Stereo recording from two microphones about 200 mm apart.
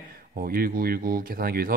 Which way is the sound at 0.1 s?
45° right (ahead or behind).